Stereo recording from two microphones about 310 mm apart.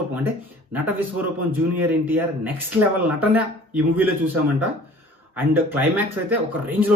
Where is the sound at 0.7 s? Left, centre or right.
Centre.